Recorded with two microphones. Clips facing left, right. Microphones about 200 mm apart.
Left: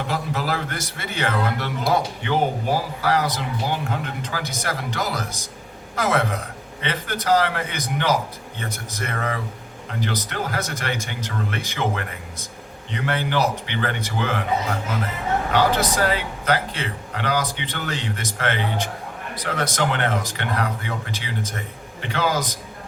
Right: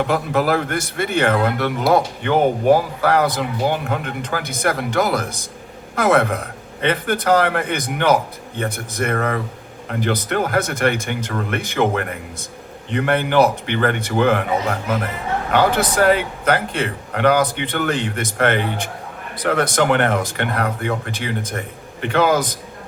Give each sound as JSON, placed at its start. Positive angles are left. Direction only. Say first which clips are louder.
{"t": 0.1, "sound": "a man's voice", "louder": "right 7 dB", "side_deg": -55}
{"t": 15.5, "sound": "a man's voice", "louder": "right 5 dB", "side_deg": -55}